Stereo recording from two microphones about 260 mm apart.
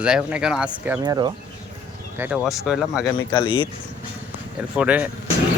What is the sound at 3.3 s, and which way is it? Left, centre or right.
Speech, centre.